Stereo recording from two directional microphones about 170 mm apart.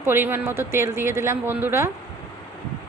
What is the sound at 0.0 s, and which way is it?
A woman's voice, 15° right (ahead or behind).